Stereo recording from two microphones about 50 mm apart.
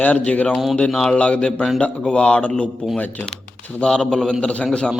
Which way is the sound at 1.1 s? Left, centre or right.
Left.